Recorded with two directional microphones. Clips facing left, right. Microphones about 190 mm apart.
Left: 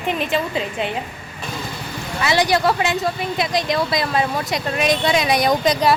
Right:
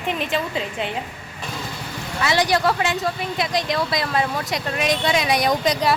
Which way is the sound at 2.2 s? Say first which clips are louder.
Left 2 dB; 10° left (ahead or behind).